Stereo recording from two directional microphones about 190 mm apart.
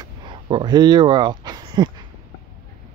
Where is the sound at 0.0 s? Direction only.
25° right (ahead or behind).